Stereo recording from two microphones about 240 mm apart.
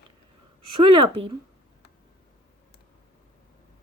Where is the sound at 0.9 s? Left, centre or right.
Right.